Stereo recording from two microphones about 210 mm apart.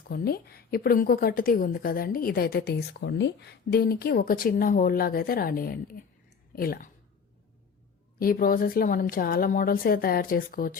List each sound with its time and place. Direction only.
0.1 s a woman's voice: 45° left (ahead or behind)
8.2 s a woman's voice: 45° left (ahead or behind)